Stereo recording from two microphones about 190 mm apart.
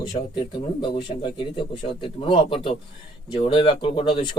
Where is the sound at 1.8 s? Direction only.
25° left (ahead or behind).